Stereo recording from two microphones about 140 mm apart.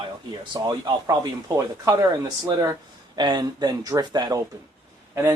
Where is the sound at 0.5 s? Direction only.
30° right (ahead or behind).